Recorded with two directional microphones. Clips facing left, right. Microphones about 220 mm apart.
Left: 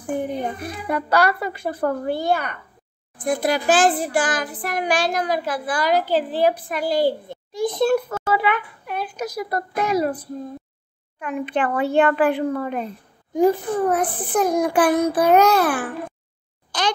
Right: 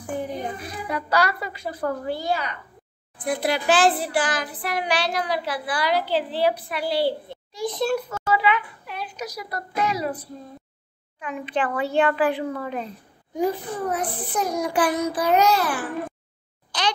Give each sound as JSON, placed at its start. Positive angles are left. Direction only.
{"t": 0.2, "sound": "a woman's voice", "side_deg": 55}
{"t": 3.2, "sound": "a child's voice", "side_deg": 45}